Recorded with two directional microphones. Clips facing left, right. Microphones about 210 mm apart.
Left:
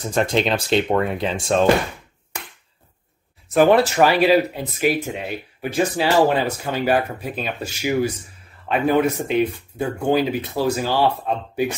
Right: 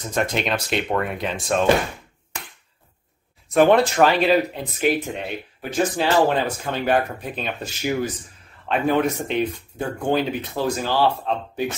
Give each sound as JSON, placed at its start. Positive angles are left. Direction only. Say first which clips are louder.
{"t": 0.1, "sound": "speech", "louder": "left 3 dB", "side_deg": 30}
{"t": 3.5, "sound": "speech", "louder": "left 1 dB", "side_deg": 5}